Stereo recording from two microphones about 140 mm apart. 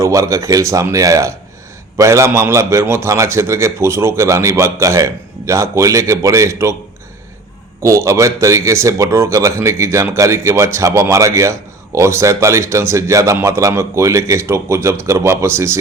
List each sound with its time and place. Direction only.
0.0 s a man's voice: 25° right (ahead or behind)
7.8 s a man's voice: 20° right (ahead or behind)